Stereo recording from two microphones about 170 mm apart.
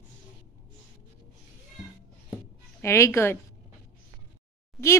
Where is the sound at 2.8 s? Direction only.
15° left (ahead or behind).